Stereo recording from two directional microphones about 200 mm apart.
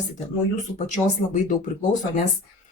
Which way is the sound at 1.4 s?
40° left (ahead or behind).